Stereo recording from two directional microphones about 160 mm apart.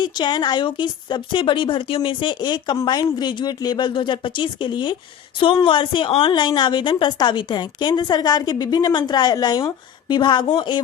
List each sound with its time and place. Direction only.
0.0 s a woman's voice: 30° left (ahead or behind)